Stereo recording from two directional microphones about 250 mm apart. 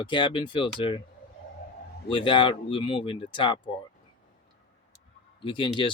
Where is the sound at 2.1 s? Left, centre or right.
Centre.